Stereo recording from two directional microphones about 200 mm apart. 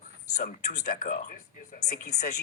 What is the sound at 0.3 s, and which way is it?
Speech, 40° left (ahead or behind).